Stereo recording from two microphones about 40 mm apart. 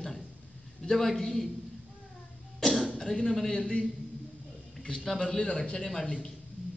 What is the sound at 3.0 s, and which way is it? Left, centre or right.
Speech, centre.